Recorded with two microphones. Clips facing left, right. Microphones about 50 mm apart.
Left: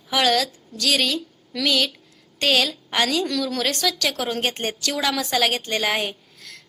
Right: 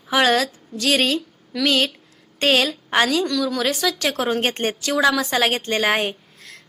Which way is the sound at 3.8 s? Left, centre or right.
Right.